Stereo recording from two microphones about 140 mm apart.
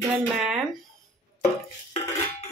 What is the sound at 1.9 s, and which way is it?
Dishes, 55° left (ahead or behind).